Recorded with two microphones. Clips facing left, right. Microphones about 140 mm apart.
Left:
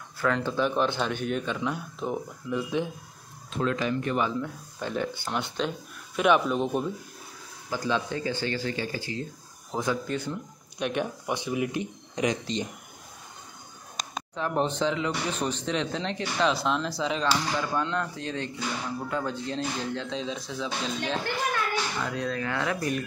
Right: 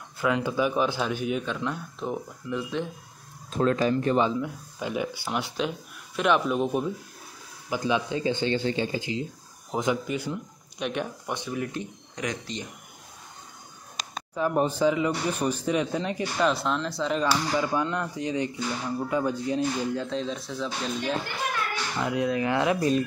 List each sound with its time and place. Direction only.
0.2 s speech: 10° right (ahead or behind); by 2.9 s 5° left (ahead or behind)
3.5 s speech: 40° right (ahead or behind)
4.3 s speech: 10° right (ahead or behind)
7.7 s speech: 15° right (ahead or behind)
10.8 s speech: centre (ahead or behind); by 12.6 s 25° left (ahead or behind)
14.3 s speech: 5° right (ahead or behind)
22.0 s speech: 15° right (ahead or behind)